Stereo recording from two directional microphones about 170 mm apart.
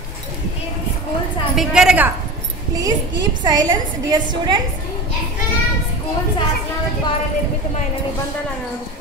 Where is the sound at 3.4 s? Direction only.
25° right (ahead or behind).